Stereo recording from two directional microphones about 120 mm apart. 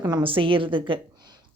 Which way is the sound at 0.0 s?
40° right (ahead or behind).